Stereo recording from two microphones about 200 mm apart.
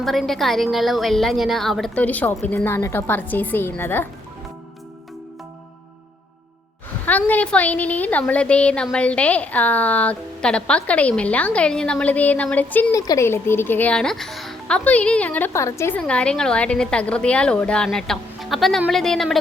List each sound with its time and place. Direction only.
0.0 s a woman's voice: centre (ahead or behind)
7.0 s a woman's voice: 10° left (ahead or behind)